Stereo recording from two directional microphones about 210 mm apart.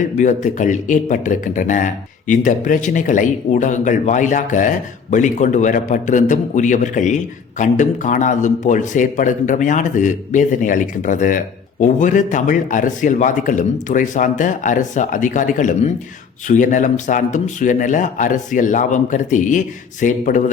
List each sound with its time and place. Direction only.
0.2 s a man's voice: 35° left (ahead or behind)